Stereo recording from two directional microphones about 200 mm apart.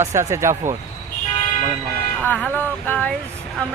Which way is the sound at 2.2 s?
10° left (ahead or behind).